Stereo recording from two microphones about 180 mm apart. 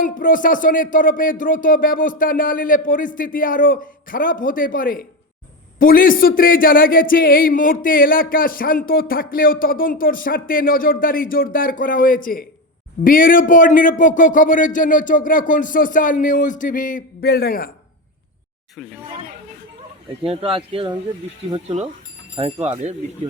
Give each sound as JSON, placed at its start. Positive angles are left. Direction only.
{"t": 0.0, "sound": "speech", "side_deg": 50}
{"t": 20.2, "sound": "speech", "side_deg": -30}
{"t": 22.4, "sound": "speech", "side_deg": -25}